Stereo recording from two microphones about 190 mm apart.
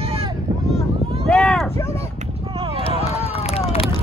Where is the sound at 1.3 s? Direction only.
Centre (ahead or behind).